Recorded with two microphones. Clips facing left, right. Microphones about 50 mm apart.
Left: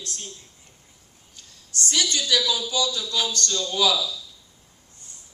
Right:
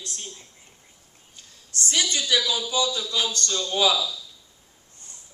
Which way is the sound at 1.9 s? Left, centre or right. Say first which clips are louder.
Even; centre.